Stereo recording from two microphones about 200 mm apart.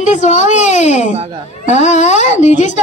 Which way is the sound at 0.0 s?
35° left (ahead or behind).